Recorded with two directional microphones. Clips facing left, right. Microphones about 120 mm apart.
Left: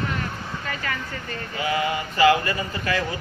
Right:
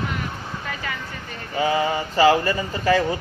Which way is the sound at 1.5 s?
30° right (ahead or behind).